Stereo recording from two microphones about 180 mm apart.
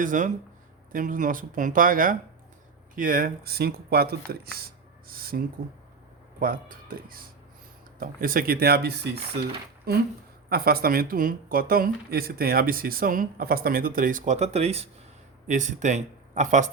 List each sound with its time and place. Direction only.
0.0 s speech: 45° right (ahead or behind)